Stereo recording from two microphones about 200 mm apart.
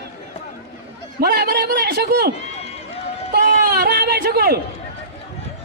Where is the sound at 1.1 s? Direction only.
50° right (ahead or behind).